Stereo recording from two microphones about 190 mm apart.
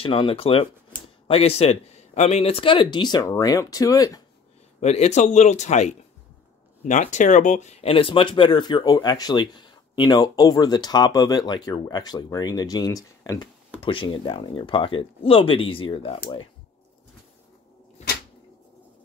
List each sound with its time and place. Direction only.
0.0 s speech: 25° left (ahead or behind)
4.7 s speech: 35° left (ahead or behind)